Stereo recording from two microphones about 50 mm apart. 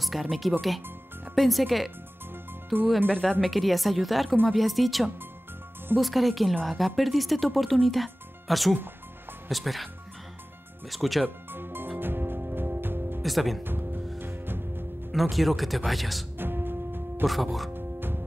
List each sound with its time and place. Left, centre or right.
0.0 s speech: centre
3.1 s speech: centre
3.4 s speech: centre
10.9 s speech: centre
11.2 s music: right
13.2 s speech: centre
13.7 s music: right
15.0 s speech: centre
16.3 s music: right
17.2 s speech: centre
17.7 s music: right